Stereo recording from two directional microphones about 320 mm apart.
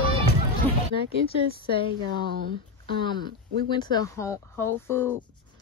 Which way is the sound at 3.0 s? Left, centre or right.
Centre.